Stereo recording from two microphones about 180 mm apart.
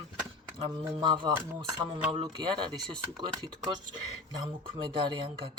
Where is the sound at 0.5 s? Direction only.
25° right (ahead or behind).